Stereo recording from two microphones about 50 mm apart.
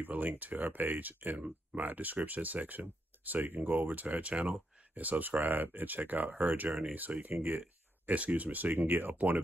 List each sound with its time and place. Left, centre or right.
0.0 s speech: right
8.1 s speech: right